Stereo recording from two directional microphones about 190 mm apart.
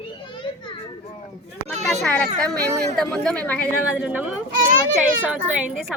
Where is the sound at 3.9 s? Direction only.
5° right (ahead or behind).